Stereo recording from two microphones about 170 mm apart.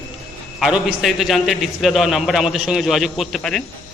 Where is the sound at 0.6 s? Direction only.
Centre (ahead or behind).